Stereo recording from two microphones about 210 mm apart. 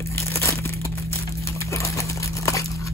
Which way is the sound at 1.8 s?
15° left (ahead or behind).